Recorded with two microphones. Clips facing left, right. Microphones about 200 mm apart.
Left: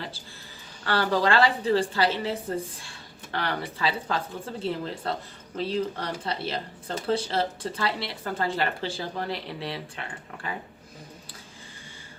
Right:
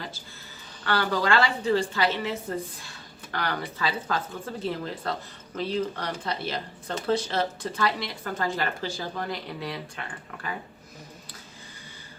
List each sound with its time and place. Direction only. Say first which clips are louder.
0.9 s a woman's voice: left 1 dB; 35° left (ahead or behind)